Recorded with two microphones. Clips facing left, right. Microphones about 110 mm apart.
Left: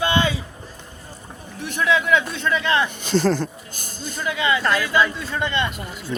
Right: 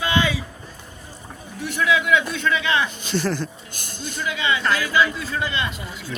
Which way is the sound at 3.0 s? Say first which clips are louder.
Left 4 dB; 50° left (ahead or behind).